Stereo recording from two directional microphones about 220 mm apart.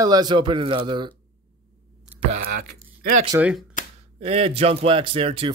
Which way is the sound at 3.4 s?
5° right (ahead or behind).